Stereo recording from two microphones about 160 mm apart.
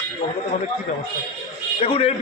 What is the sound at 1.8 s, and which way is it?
Speech, 35° left (ahead or behind).